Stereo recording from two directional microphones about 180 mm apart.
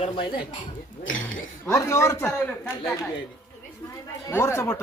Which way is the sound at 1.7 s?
15° left (ahead or behind).